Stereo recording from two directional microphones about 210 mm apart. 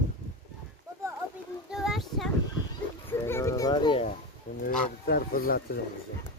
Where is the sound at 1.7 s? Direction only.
Centre (ahead or behind).